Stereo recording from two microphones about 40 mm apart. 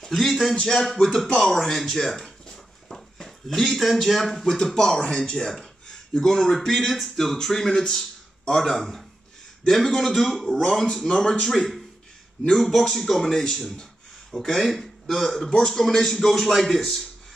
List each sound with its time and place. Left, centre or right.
0.1 s a man's voice: centre
5.5 s a sound: centre
6.2 s a man's voice: centre
11.1 s speech: left
11.4 s a man's voice: centre
12.9 s a man's voice: centre